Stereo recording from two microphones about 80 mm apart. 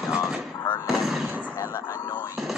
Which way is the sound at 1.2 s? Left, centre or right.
Centre.